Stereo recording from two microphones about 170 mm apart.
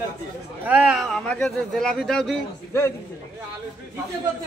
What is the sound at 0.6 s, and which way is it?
Speech, 10° right (ahead or behind).